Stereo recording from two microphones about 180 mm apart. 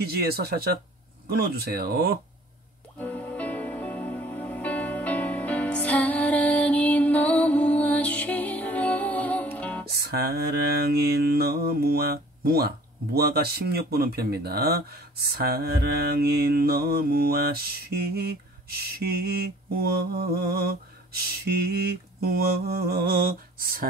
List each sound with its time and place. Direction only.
0.0 s mantra: 60° right (ahead or behind)
3.0 s music: 10° left (ahead or behind)
9.8 s mantra: 60° right (ahead or behind)